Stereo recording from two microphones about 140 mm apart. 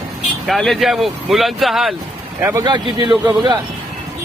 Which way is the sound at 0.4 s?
Centre (ahead or behind).